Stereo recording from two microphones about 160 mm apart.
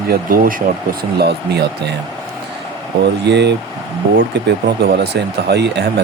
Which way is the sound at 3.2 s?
90° right.